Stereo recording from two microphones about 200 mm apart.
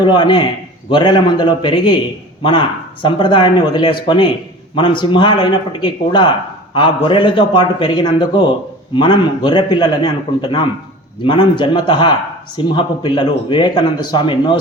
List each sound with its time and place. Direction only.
0.0 s speech: 20° left (ahead or behind)